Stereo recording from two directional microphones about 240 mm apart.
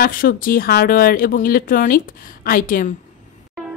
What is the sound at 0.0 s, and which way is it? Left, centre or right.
Speech, left.